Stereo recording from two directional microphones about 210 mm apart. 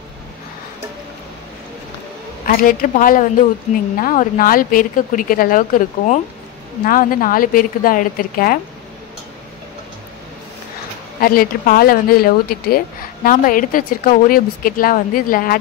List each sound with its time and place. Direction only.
2.4 s speech: 40° left (ahead or behind)
11.1 s a woman's voice: 45° left (ahead or behind)